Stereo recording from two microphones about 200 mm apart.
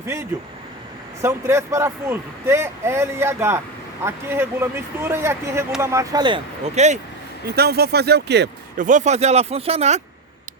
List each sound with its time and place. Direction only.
1.2 s speech: 15° right (ahead or behind); by 7.0 s 35° right (ahead or behind)
7.4 s speech: 50° right (ahead or behind)
8.8 s speech: 40° right (ahead or behind)